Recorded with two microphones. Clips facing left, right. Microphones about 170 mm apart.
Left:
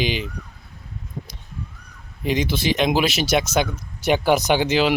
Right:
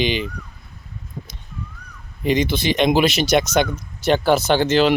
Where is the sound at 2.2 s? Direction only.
5° left (ahead or behind).